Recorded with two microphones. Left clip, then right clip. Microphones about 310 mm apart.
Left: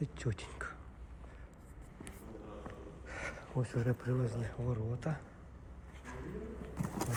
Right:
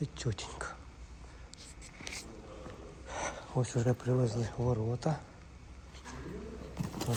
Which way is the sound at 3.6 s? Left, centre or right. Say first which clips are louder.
Right 5 dB; centre.